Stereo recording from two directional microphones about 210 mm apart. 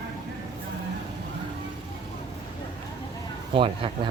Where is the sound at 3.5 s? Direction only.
25° right (ahead or behind).